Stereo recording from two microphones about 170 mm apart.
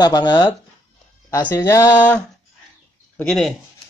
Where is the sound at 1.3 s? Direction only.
15° left (ahead or behind).